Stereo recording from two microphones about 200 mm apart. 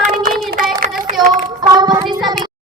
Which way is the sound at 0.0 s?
45° right (ahead or behind).